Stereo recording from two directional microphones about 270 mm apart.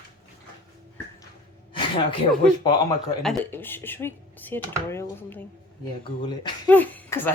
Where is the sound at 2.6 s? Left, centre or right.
Centre.